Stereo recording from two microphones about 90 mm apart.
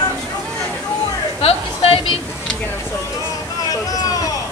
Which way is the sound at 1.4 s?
90° left.